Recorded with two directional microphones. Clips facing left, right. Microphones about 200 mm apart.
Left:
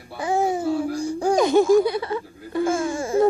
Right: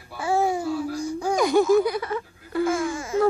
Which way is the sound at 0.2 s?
20° left (ahead or behind).